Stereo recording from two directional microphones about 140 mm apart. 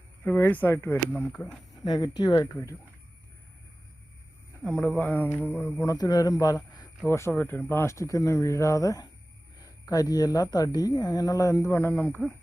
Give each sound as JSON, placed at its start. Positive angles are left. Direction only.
{"t": 0.3, "sound": "speech", "side_deg": 15}
{"t": 1.8, "sound": "speech", "side_deg": 30}
{"t": 4.6, "sound": "speech", "side_deg": 10}
{"t": 5.7, "sound": "speech", "side_deg": 25}